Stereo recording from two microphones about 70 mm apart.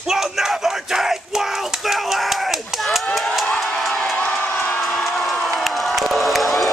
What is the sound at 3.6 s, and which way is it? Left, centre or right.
Crowd, centre.